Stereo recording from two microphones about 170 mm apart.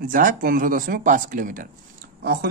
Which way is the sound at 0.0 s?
55° right (ahead or behind).